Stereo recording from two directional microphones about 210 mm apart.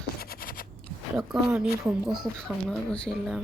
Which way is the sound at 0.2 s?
45° left (ahead or behind).